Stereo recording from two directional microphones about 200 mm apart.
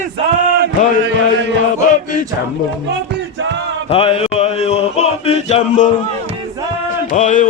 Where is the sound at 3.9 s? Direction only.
30° left (ahead or behind).